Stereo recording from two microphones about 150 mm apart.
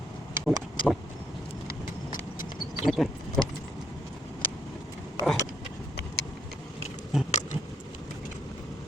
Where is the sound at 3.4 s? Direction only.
Centre (ahead or behind).